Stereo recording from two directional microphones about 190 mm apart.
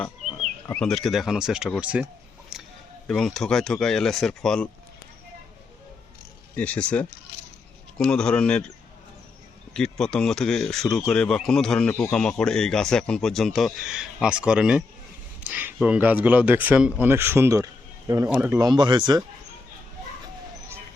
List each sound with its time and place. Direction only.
0.7 s speech: 5° left (ahead or behind)
2.5 s a sound: 5° right (ahead or behind)
3.1 s speech: 5° left (ahead or behind)
6.6 s speech: 5° left (ahead or behind)
9.7 s speech: 5° left (ahead or behind); by 19.2 s 25° right (ahead or behind)